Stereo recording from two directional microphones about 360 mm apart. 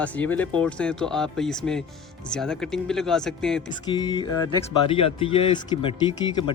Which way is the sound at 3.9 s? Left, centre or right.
Centre.